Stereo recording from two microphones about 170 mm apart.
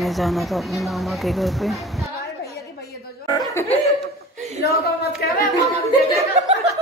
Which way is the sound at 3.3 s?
15° left (ahead or behind).